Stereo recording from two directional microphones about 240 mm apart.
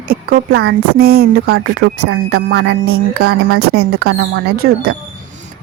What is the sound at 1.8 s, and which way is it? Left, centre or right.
Speech, right.